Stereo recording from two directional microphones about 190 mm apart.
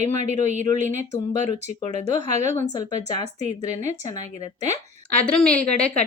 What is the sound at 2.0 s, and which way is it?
Speech, 40° right (ahead or behind).